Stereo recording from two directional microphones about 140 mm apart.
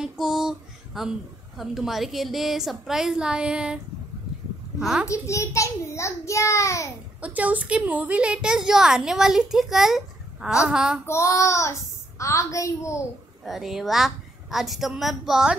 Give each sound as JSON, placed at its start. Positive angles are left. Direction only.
{"t": 0.0, "sound": "a sound", "side_deg": 0}
{"t": 1.6, "sound": "a woman's voice", "side_deg": 0}
{"t": 5.0, "sound": "a child's voice", "side_deg": 20}
{"t": 7.2, "sound": "a woman's voice", "side_deg": -10}
{"t": 11.1, "sound": "a child's voice", "side_deg": 20}
{"t": 13.4, "sound": "a woman's voice", "side_deg": 0}